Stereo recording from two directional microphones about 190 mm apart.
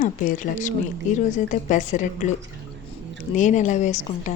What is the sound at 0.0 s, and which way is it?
A woman's voice, 45° left (ahead or behind).